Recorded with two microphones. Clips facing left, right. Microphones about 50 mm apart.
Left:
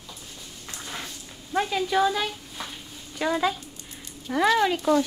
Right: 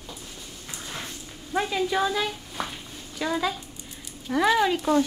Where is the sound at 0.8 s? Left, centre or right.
Centre.